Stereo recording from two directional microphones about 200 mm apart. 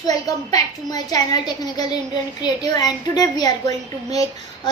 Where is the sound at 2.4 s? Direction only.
20° left (ahead or behind).